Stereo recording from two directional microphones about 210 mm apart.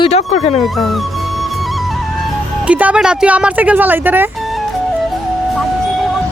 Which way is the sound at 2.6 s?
5° right (ahead or behind).